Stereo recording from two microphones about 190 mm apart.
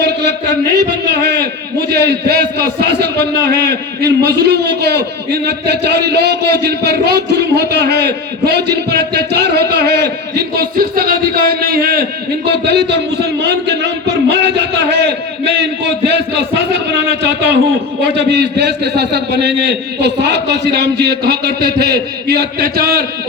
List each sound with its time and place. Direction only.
0.0 s a man's voice: 60° right (ahead or behind)